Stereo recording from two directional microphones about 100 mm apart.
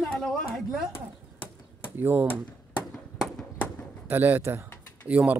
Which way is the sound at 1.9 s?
20° right (ahead or behind).